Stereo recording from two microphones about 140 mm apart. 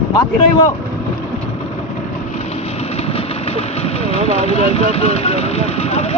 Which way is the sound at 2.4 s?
45° left (ahead or behind).